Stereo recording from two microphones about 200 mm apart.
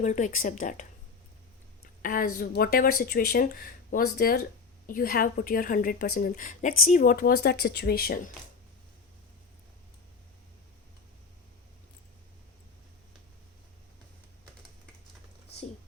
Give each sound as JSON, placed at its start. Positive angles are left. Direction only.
{"t": 0.0, "sound": "speech", "side_deg": 40}
{"t": 2.0, "sound": "a woman's voice", "side_deg": 45}